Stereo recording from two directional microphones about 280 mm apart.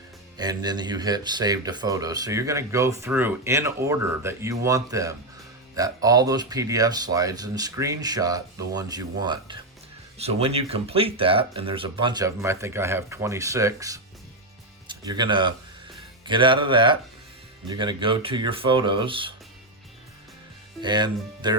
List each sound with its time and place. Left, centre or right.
0.3 s speech: centre
20.8 s speech: centre